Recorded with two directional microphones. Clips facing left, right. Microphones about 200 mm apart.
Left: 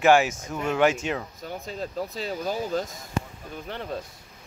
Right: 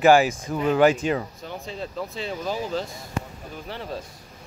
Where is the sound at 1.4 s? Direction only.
40° left (ahead or behind).